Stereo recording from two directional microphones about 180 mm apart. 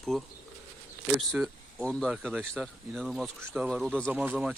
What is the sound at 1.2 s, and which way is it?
Speech, centre (ahead or behind).